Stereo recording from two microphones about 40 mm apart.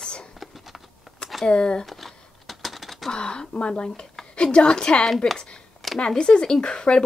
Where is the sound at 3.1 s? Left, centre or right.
Left.